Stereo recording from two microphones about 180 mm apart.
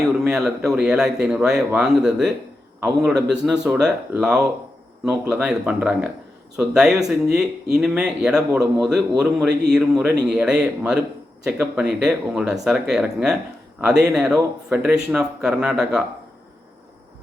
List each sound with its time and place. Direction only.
0.1 s a man's voice: centre (ahead or behind)